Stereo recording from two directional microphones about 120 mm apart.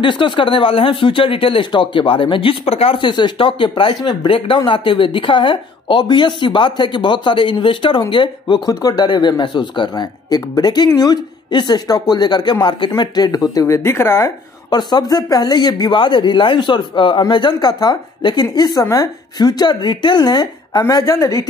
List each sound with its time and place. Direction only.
0.0 s a woman's voice: 45° left (ahead or behind); by 14.3 s 20° left (ahead or behind)
14.7 s a woman's voice: 35° left (ahead or behind)